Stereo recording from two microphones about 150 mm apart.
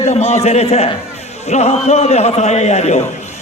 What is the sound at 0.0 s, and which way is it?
A man's voice, 45° left (ahead or behind).